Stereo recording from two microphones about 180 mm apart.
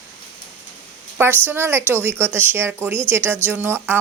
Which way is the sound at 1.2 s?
10° right (ahead or behind).